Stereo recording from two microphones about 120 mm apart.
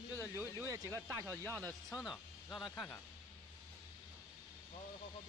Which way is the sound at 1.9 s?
Centre (ahead or behind).